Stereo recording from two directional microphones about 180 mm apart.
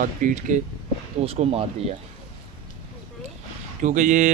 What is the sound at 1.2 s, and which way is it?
Speech, 35° right (ahead or behind).